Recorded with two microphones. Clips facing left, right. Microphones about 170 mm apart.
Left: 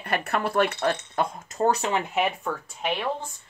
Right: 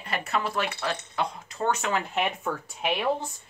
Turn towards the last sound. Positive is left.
turn(degrees=-5)  # may be behind; listen again after turning